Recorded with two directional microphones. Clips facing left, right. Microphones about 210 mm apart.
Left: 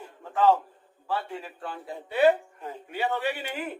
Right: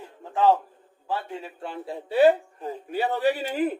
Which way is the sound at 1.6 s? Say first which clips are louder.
Right 3 dB; 30° right (ahead or behind).